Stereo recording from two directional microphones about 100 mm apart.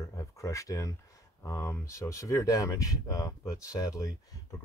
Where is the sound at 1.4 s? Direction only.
30° left (ahead or behind).